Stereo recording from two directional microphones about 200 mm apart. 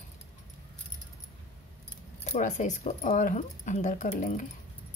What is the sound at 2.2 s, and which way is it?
A woman's voice, 35° left (ahead or behind).